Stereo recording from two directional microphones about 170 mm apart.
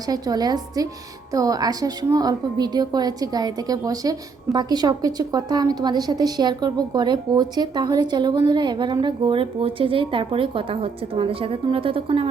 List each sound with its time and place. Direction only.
0.1 s a woman's voice: 25° right (ahead or behind)